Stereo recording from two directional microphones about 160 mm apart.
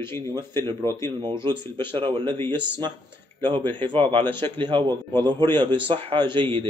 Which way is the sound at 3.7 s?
30° right (ahead or behind).